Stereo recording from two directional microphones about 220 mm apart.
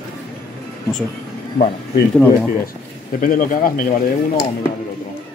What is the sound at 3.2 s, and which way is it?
Speech, 40° left (ahead or behind).